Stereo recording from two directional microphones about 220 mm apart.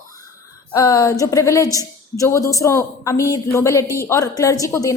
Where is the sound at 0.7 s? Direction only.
15° left (ahead or behind).